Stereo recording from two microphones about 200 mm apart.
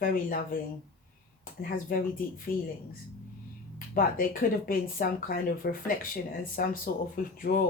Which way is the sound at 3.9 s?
45° left (ahead or behind).